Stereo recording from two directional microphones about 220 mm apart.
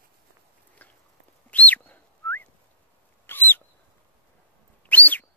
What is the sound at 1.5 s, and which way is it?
Bird, 5° left (ahead or behind).